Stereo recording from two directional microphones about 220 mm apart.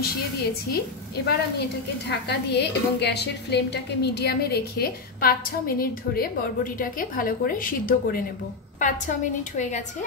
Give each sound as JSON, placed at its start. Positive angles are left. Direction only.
{"t": 0.7, "sound": "a woman's voice", "side_deg": 45}